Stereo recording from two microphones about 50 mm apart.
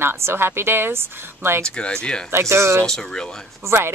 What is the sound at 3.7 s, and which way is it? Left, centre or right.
Speech, right.